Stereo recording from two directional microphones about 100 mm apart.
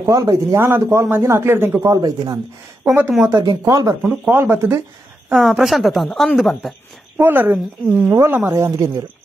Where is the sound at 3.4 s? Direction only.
40° right (ahead or behind).